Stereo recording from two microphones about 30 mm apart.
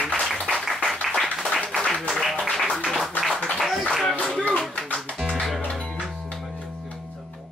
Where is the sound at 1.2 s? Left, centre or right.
Centre.